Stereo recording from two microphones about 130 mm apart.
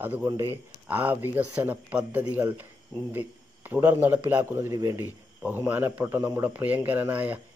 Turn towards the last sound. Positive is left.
turn(degrees=-10)  # may be behind; listen again after turning